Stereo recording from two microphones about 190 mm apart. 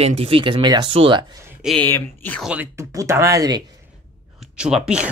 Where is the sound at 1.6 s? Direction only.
10° left (ahead or behind).